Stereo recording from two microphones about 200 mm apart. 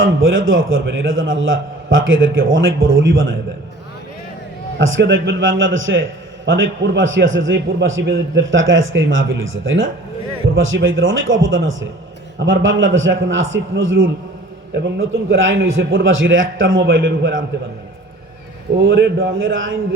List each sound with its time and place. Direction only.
0.0 s a man's voice: 75° right (ahead or behind)
4.8 s a man's voice: 70° right (ahead or behind)
14.7 s a man's voice: 55° right (ahead or behind); by 16.8 s 75° right (ahead or behind)
18.8 s a man's voice: 55° right (ahead or behind)
19.4 s a man's voice: 75° right (ahead or behind)